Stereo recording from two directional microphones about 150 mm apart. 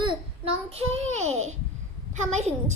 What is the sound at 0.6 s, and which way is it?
A child's voice, 45° right (ahead or behind).